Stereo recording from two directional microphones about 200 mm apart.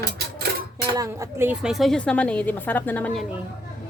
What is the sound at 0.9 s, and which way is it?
A woman's voice, 15° right (ahead or behind).